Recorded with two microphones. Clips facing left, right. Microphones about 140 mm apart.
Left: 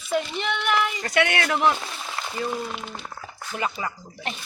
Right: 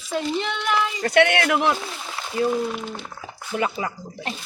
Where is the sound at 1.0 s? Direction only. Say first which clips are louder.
Right 5 dB; 55° right (ahead or behind).